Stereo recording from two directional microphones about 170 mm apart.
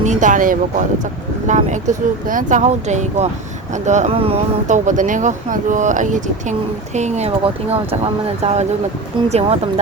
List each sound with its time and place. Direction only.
0.0 s speech: 45° right (ahead or behind)